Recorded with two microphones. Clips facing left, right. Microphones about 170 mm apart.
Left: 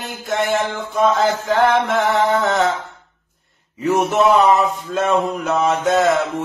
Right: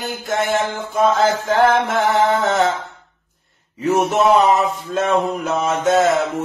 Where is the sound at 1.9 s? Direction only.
Centre (ahead or behind).